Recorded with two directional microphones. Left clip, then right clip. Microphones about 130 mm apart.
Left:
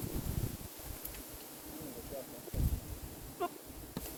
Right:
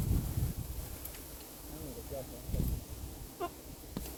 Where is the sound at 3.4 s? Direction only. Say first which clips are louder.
Left 2 dB; 35° left (ahead or behind).